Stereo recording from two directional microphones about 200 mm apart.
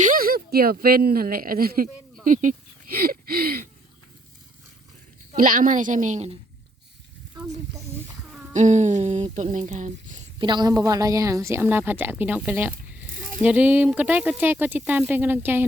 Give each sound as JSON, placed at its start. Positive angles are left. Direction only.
{"t": 0.0, "sound": "speech", "side_deg": -45}
{"t": 5.3, "sound": "a woman's voice", "side_deg": -40}
{"t": 8.3, "sound": "a sound", "side_deg": -5}
{"t": 8.5, "sound": "a woman's voice", "side_deg": -35}
{"t": 10.3, "sound": "a woman's voice", "side_deg": -25}